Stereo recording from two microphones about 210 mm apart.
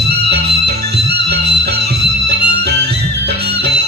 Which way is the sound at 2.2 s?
50° right (ahead or behind).